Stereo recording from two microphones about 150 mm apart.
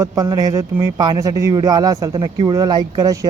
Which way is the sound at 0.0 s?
25° right (ahead or behind).